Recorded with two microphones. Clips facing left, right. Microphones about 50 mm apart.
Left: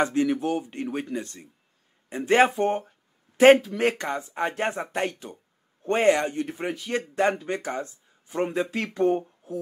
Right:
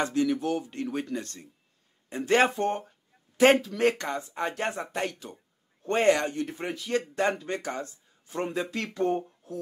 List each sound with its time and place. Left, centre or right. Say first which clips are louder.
0.0 s speech: left 3 dB; left
5.3 s speech: left 2 dB; centre
5.9 s speech: left 2 dB; centre